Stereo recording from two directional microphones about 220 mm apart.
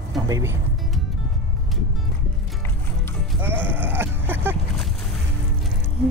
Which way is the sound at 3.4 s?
10° right (ahead or behind).